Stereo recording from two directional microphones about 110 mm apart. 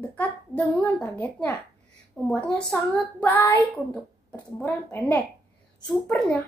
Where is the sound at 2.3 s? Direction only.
10° left (ahead or behind).